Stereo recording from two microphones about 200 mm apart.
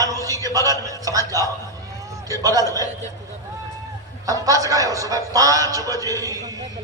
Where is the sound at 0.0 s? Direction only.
15° right (ahead or behind).